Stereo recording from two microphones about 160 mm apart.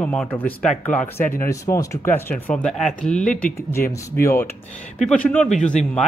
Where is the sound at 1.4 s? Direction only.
20° left (ahead or behind); by 3.2 s centre (ahead or behind).